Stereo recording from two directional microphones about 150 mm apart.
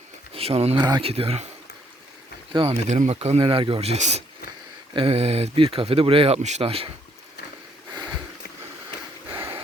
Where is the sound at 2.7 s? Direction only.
50° right (ahead or behind).